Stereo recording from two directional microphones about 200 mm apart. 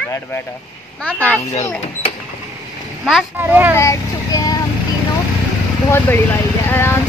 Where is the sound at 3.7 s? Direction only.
15° left (ahead or behind).